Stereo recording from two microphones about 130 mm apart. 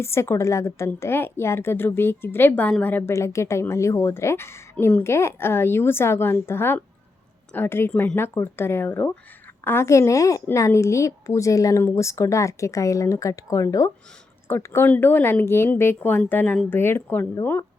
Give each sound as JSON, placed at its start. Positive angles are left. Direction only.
{"t": 0.0, "sound": "a woman's voice", "side_deg": 20}